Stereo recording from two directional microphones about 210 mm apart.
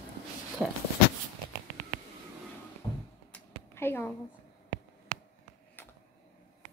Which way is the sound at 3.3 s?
10° left (ahead or behind).